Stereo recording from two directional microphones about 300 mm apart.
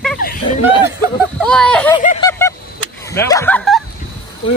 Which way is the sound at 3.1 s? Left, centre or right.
Centre.